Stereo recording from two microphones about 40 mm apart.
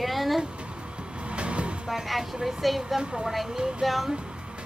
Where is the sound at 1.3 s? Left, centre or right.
Right.